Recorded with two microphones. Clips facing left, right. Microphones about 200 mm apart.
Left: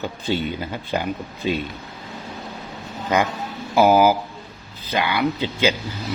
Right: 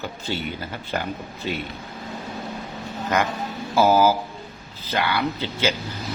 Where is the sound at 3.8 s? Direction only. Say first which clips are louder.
Left 2 dB; 15° left (ahead or behind).